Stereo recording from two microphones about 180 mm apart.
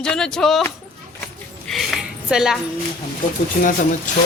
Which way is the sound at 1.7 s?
Centre (ahead or behind).